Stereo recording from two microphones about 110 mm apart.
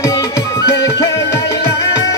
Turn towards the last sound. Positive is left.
turn(degrees=35)  # may be behind; listen again after turning